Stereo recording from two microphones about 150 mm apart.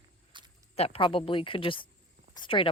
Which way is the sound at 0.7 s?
40° left (ahead or behind).